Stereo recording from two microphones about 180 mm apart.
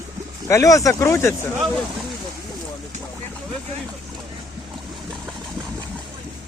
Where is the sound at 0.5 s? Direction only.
15° left (ahead or behind).